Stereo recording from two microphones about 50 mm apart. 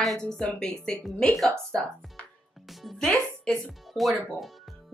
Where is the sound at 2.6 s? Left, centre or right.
Centre.